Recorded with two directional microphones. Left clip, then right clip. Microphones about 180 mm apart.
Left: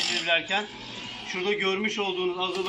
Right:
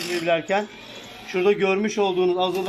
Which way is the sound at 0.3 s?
45° right (ahead or behind).